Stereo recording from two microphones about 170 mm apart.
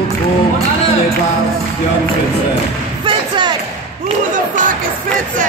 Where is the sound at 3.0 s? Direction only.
25° right (ahead or behind).